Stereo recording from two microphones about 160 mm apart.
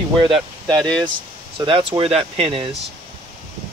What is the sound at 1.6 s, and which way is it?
Speech, 30° right (ahead or behind).